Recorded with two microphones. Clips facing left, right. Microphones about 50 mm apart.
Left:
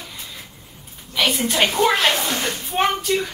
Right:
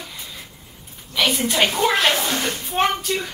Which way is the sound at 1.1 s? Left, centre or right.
Centre.